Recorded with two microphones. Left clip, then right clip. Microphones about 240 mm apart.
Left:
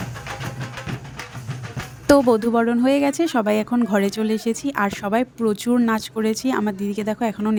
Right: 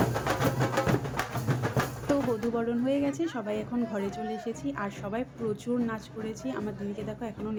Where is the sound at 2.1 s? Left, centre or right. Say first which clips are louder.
Left 14 dB; left.